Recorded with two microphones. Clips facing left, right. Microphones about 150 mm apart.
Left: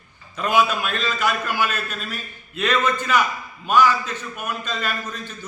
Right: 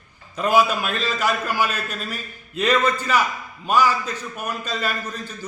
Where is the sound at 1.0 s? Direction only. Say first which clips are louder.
Even; 35° right (ahead or behind).